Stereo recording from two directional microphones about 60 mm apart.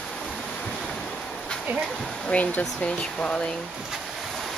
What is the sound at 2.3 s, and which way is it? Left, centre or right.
Speech, left.